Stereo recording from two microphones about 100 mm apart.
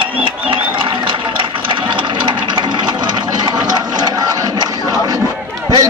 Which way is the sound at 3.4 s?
45° right (ahead or behind).